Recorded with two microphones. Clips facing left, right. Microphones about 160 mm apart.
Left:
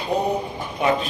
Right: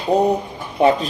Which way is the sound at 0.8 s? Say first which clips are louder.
Right 6 dB; 35° right (ahead or behind).